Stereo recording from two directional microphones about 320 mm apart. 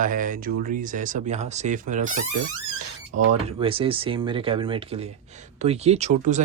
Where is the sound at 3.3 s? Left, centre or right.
Centre.